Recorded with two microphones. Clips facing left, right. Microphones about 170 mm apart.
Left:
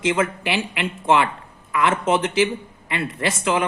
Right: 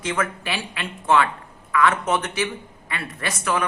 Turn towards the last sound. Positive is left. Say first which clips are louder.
# left 3 dB
turn(degrees=25)  # may be behind; listen again after turning